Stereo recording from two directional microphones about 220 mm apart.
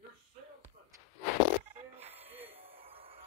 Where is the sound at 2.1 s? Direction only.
25° right (ahead or behind).